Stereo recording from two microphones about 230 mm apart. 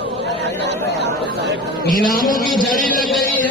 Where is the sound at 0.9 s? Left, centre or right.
Right.